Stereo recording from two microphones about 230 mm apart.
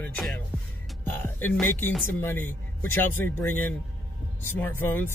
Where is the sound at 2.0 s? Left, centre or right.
Centre.